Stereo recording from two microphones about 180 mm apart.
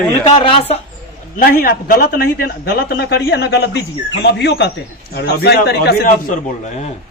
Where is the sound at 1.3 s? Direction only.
55° left (ahead or behind).